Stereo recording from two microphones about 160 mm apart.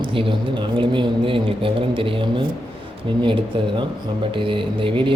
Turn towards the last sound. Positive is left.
turn(degrees=-35)  # may be behind; listen again after turning